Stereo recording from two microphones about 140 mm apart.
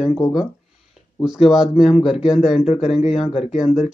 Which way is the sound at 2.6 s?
45° left (ahead or behind).